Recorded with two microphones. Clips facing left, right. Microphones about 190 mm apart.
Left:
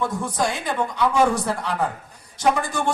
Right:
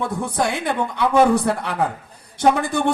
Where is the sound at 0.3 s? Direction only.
60° right (ahead or behind).